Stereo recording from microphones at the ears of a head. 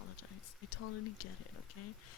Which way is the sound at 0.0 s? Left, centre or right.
Left.